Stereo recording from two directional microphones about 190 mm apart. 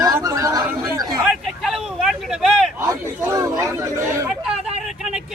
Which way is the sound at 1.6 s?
Centre (ahead or behind).